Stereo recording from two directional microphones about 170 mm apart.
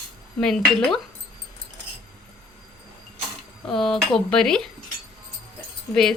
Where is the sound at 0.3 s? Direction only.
5° left (ahead or behind).